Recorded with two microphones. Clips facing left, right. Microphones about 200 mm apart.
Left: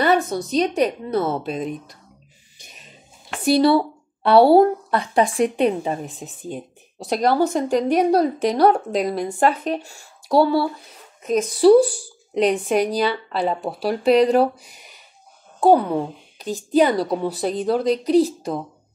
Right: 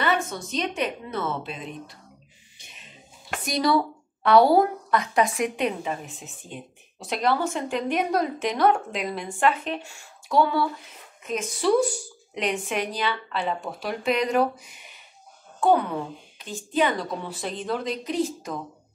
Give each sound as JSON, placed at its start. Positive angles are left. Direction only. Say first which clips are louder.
{"t": 0.0, "sound": "a woman's voice", "louder": "left 7 dB", "side_deg": 35}
{"t": 2.6, "sound": "music", "louder": "left 3 dB", "side_deg": 40}
{"t": 3.4, "sound": "a woman's voice", "louder": "left 7 dB", "side_deg": 30}